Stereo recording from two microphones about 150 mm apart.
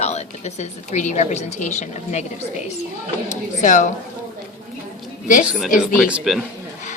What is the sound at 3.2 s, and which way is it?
Speech, 55° left (ahead or behind).